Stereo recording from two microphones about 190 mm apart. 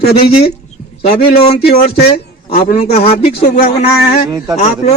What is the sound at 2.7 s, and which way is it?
A man's voice, 35° left (ahead or behind).